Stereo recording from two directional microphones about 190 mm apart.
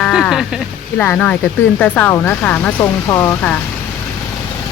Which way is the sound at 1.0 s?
10° left (ahead or behind).